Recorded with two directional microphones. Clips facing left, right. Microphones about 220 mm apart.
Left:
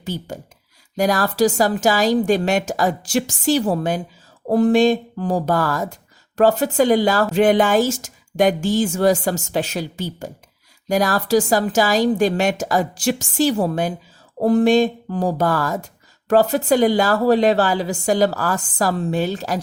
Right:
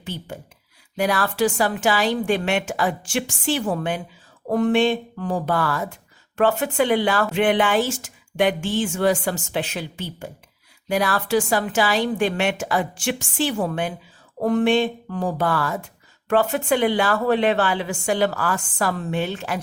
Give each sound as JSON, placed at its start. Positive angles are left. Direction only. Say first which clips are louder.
{"t": 0.0, "sound": "speech", "louder": "left 4 dB", "side_deg": 40}